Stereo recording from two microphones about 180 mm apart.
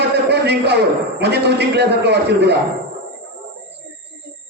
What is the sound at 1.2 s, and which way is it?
A man's voice, 65° right (ahead or behind).